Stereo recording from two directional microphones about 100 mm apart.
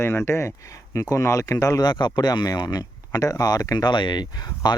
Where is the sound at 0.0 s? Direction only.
25° left (ahead or behind).